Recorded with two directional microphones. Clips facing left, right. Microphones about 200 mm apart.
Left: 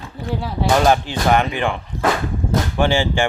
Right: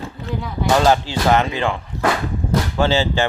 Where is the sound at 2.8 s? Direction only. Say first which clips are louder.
Even; 15° left (ahead or behind).